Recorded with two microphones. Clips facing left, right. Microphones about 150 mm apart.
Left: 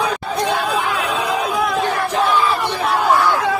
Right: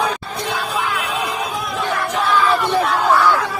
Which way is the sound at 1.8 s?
30° left (ahead or behind).